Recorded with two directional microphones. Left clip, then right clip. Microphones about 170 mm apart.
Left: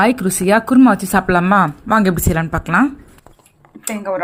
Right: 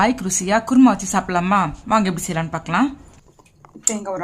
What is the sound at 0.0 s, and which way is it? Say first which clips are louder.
Speech: left 4 dB; 15° left (ahead or behind).